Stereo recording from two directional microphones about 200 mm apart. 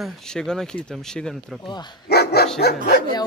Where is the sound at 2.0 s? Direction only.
55° left (ahead or behind).